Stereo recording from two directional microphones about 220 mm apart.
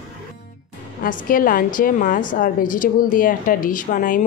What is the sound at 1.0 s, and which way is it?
A woman's voice, 40° left (ahead or behind).